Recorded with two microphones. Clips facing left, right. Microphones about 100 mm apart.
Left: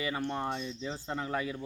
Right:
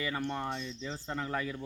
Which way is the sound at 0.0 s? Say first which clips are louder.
Left 1 dB; 15° left (ahead or behind).